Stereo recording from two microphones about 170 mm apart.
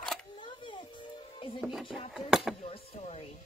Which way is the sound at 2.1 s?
5° right (ahead or behind).